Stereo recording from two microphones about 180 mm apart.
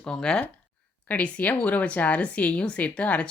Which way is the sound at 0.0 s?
5° left (ahead or behind).